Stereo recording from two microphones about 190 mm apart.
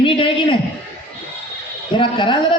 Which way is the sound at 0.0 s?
25° left (ahead or behind).